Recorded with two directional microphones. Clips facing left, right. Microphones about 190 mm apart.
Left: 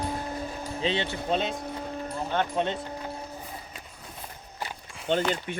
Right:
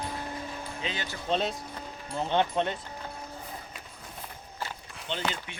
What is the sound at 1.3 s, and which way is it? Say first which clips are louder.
Speech: even; centre (ahead or behind).